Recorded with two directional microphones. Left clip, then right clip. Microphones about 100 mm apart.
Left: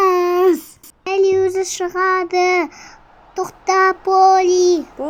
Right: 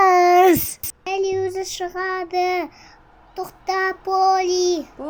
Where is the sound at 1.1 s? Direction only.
45° left (ahead or behind).